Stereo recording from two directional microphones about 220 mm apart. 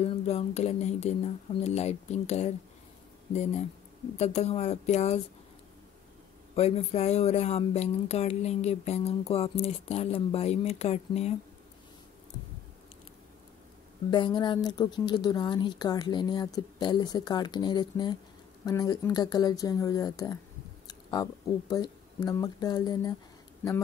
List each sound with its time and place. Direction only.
0.0 s speech: 30° left (ahead or behind)
4.2 s speech: 30° left (ahead or behind)
6.5 s speech: 30° left (ahead or behind)
14.1 s speech: 20° left (ahead or behind)